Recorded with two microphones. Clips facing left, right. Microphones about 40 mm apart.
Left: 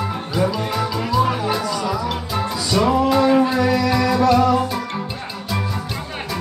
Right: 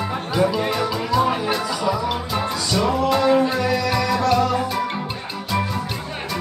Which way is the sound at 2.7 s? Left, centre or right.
Centre.